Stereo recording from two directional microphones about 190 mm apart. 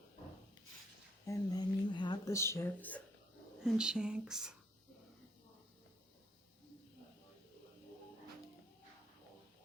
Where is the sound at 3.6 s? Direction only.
5° right (ahead or behind).